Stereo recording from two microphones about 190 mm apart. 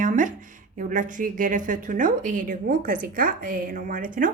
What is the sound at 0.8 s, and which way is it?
A woman's voice, 45° right (ahead or behind).